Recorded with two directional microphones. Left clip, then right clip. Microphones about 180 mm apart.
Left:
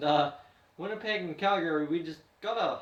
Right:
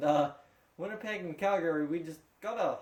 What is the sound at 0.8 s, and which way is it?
Speech, 50° right (ahead or behind).